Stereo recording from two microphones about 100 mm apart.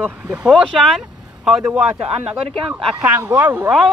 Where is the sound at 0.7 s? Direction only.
5° left (ahead or behind); by 3.7 s 20° right (ahead or behind).